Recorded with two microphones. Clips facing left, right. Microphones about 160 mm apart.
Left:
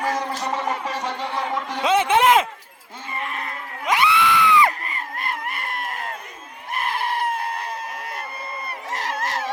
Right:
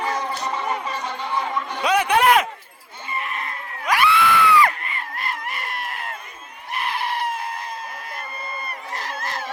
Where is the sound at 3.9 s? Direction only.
20° left (ahead or behind).